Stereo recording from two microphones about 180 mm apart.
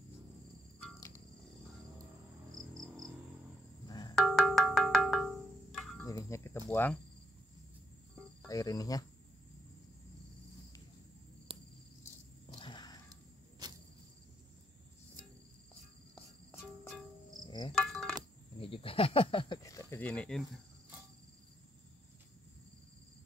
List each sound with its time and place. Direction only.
2.7 s cricket: 20° right (ahead or behind)
3.8 s music: 20° left (ahead or behind)
4.1 s music: centre (ahead or behind)
6.0 s cricket: 15° left (ahead or behind)
6.7 s speech: 10° left (ahead or behind)
8.5 s speech: 20° left (ahead or behind)
11.5 s cricket: 30° right (ahead or behind)
12.5 s a sound: 25° left (ahead or behind)
13.1 s a sound: 20° right (ahead or behind)
17.5 s insect: 25° left (ahead or behind)
17.7 s insect: centre (ahead or behind)
18.6 s a sound: 30° left (ahead or behind); by 20.4 s 5° left (ahead or behind)